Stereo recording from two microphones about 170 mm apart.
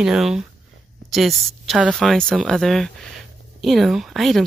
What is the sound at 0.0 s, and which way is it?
Speech, 5° right (ahead or behind).